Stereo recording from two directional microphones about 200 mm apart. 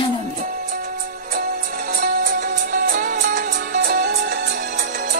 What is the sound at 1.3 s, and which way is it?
Music, 45° right (ahead or behind).